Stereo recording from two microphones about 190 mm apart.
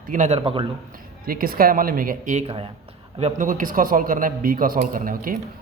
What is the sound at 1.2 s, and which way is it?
A man's voice, 50° right (ahead or behind).